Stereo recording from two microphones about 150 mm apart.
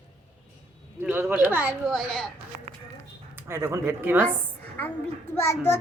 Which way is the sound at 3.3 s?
15° right (ahead or behind).